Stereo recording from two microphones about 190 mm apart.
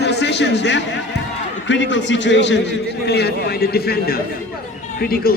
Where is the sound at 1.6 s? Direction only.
70° left (ahead or behind).